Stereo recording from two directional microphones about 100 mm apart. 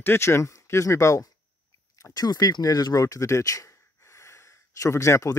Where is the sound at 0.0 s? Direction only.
25° left (ahead or behind).